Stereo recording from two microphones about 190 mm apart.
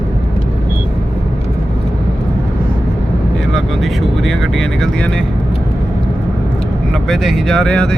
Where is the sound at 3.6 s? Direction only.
Centre (ahead or behind).